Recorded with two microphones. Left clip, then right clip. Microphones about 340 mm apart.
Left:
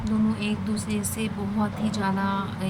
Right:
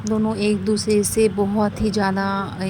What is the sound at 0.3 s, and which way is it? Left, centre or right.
Speech, centre.